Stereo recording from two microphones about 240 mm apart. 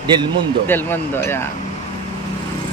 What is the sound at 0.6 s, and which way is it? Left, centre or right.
Speech, centre.